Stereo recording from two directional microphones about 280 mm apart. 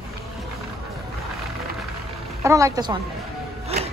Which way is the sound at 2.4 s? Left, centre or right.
Centre.